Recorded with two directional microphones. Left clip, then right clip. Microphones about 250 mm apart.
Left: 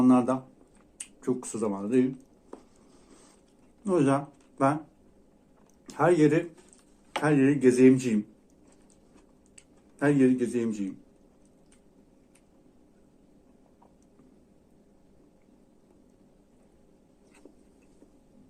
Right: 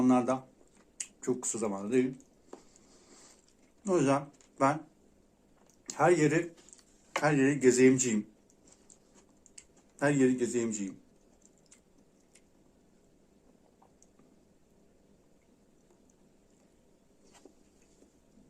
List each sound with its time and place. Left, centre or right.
0.0 s speech: centre
0.9 s a sound: centre
3.8 s speech: centre
5.8 s speech: centre
9.6 s speech: centre